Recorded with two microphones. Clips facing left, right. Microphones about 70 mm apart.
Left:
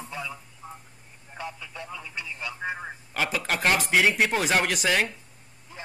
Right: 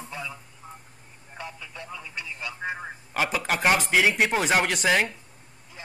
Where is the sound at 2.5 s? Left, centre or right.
Centre.